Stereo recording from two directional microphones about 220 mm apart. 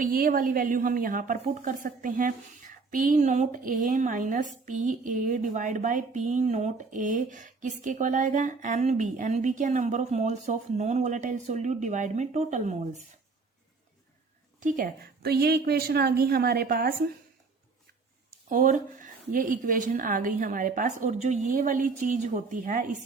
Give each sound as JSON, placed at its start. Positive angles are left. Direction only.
{"t": 0.0, "sound": "a woman's voice", "side_deg": -40}
{"t": 14.6, "sound": "a woman's voice", "side_deg": -35}
{"t": 18.4, "sound": "a woman's voice", "side_deg": -35}